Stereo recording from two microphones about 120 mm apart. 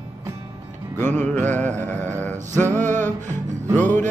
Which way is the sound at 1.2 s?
15° left (ahead or behind).